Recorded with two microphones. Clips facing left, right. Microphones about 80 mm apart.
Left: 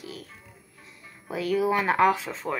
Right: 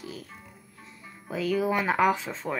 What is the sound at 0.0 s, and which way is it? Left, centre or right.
Music, centre.